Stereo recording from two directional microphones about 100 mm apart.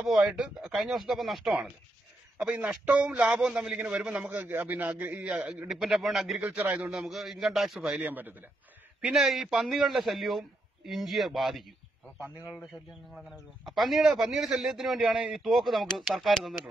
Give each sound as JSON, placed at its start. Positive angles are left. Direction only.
{"t": 0.0, "sound": "a man's voice", "side_deg": -5}
{"t": 6.5, "sound": "a man's voice", "side_deg": -15}
{"t": 8.0, "sound": "a man's voice", "side_deg": -20}
{"t": 9.0, "sound": "a man's voice", "side_deg": 0}
{"t": 13.7, "sound": "a man's voice", "side_deg": 0}